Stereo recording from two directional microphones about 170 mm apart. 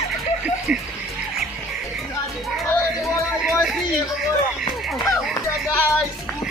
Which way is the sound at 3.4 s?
Centre (ahead or behind).